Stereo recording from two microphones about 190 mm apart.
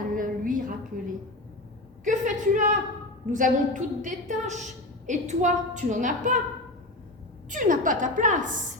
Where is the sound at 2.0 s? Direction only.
40° right (ahead or behind).